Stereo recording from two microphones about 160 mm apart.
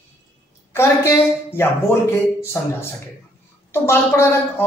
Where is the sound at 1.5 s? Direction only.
15° left (ahead or behind).